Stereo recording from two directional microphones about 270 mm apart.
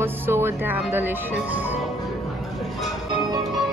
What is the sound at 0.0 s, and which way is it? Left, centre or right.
Speech, centre.